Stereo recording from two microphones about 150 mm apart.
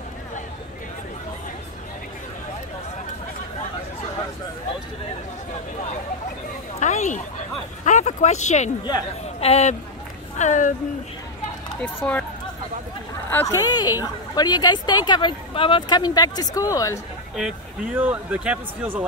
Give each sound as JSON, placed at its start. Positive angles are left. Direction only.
{"t": 6.8, "sound": "a sound", "side_deg": 55}
{"t": 9.4, "sound": "speech", "side_deg": 45}
{"t": 11.8, "sound": "speech", "side_deg": 10}
{"t": 13.3, "sound": "speech", "side_deg": 20}
{"t": 17.4, "sound": "speech", "side_deg": -10}